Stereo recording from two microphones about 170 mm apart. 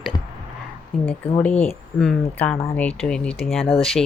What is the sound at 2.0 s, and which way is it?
Speech, 5° left (ahead or behind).